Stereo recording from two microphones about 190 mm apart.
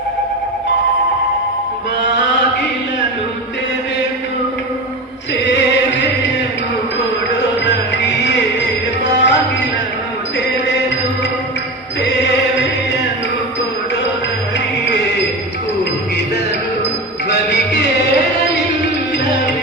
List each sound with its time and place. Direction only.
7.3 s music: 65° left (ahead or behind)
17.2 s music: 65° left (ahead or behind)